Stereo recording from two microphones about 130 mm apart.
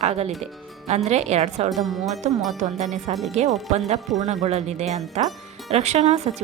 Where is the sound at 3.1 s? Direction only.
50° right (ahead or behind).